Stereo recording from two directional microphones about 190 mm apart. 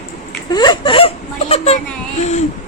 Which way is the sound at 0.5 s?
20° left (ahead or behind).